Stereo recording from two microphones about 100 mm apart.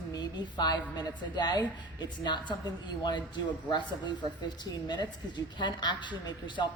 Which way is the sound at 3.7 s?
50° left (ahead or behind).